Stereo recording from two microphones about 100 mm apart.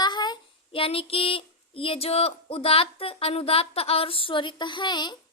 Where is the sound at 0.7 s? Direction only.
65° left (ahead or behind).